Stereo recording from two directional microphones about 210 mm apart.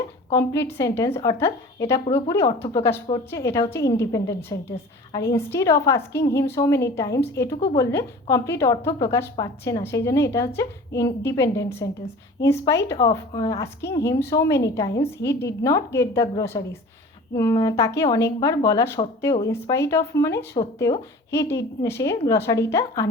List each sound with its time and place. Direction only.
0.8 s a woman's voice: 10° left (ahead or behind)
2.0 s speech: 25° left (ahead or behind)
2.3 s a woman's voice: 10° left (ahead or behind)